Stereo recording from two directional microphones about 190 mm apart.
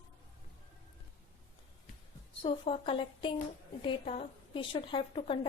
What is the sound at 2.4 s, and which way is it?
A woman's voice, 30° left (ahead or behind).